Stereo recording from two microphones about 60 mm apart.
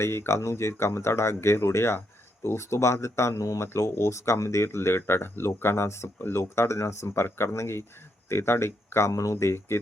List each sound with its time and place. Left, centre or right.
0.0 s speech: left
3.7 s speech: left